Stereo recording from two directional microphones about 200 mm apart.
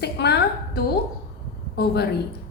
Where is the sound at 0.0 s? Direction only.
55° left (ahead or behind).